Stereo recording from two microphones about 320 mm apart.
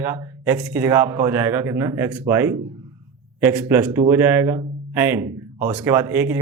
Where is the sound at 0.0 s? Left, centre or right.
Centre.